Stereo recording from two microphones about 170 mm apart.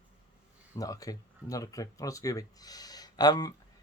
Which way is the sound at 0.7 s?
20° left (ahead or behind).